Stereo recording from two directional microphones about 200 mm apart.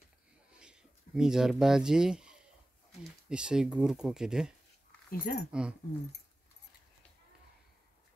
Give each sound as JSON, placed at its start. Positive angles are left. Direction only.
{"t": 0.6, "sound": "speech", "side_deg": -5}
{"t": 5.1, "sound": "speech", "side_deg": 45}
{"t": 5.5, "sound": "speech", "side_deg": -5}